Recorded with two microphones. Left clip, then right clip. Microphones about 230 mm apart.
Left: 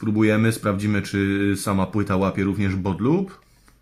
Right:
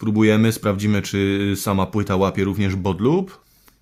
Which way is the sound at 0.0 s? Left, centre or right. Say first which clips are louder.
Right 2 dB; right.